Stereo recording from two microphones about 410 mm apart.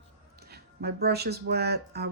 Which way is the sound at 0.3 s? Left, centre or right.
Right.